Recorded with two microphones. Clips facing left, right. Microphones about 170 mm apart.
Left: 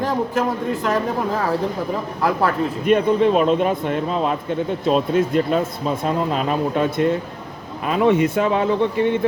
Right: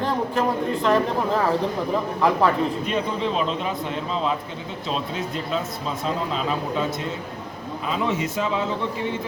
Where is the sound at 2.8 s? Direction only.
55° left (ahead or behind).